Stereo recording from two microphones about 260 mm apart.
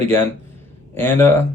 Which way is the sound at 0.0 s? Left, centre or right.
Centre.